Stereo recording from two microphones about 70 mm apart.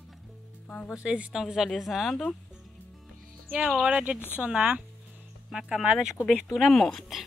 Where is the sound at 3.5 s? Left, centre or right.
Centre.